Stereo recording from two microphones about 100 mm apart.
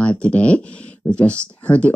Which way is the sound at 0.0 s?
10° left (ahead or behind).